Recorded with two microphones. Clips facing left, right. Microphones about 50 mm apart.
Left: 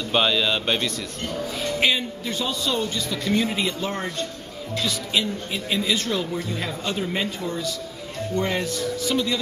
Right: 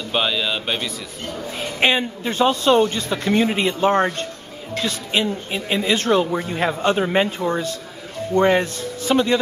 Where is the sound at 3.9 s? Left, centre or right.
Right.